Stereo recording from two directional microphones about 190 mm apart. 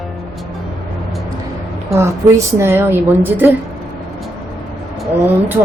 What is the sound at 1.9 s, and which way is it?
Speech, 15° right (ahead or behind).